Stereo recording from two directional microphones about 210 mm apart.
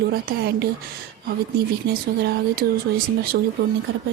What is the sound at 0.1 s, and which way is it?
Speech, 45° right (ahead or behind).